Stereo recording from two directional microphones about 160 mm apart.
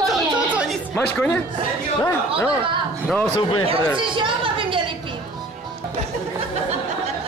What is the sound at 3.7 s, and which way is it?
A woman's voice, 30° right (ahead or behind).